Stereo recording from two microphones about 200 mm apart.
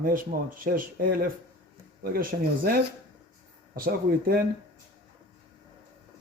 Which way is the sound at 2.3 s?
50° right (ahead or behind).